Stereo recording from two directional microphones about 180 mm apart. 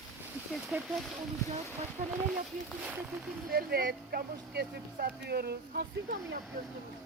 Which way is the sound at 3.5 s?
55° right (ahead or behind).